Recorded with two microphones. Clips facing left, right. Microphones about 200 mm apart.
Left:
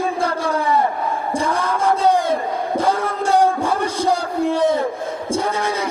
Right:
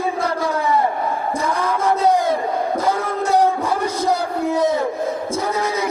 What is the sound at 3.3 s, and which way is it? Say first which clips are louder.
Music: left 1 dB; 30° left (ahead or behind).